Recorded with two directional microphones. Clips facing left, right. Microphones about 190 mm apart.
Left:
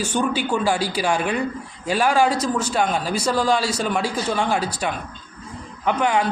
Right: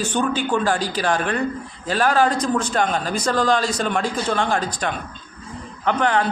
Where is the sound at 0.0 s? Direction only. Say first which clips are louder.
Even; 10° left (ahead or behind).